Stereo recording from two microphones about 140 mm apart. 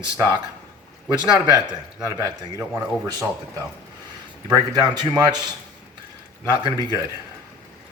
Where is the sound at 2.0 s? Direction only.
20° right (ahead or behind).